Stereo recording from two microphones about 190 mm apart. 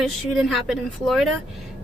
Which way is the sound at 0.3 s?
Centre (ahead or behind).